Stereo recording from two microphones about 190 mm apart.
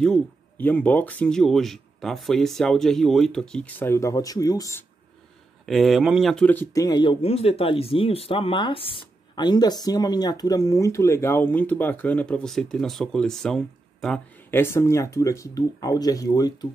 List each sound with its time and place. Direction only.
0.0 s speech: 5° left (ahead or behind)
5.7 s speech: centre (ahead or behind); by 16.5 s 20° left (ahead or behind)